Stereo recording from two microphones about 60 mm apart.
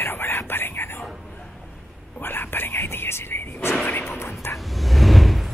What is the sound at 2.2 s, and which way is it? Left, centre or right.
Speech, left.